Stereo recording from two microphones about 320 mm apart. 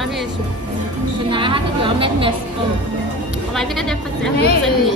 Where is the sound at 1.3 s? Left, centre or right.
Centre.